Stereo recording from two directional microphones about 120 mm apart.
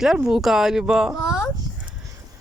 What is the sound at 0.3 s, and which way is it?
Speech, 5° right (ahead or behind).